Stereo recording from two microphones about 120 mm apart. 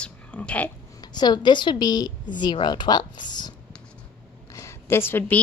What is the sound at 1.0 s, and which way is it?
A woman's voice, 35° left (ahead or behind).